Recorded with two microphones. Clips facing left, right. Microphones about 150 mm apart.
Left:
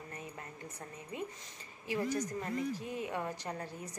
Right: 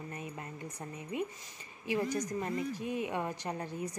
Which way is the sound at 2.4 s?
20° right (ahead or behind).